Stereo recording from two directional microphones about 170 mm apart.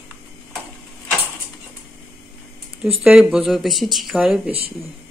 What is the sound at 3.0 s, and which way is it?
Speech, 5° right (ahead or behind).